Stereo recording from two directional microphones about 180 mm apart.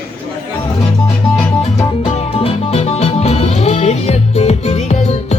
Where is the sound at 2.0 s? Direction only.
30° left (ahead or behind).